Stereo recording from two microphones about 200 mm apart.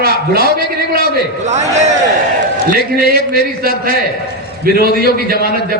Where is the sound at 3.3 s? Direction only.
45° right (ahead or behind).